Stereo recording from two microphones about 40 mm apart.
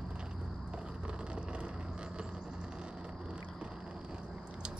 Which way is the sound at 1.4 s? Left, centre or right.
Right.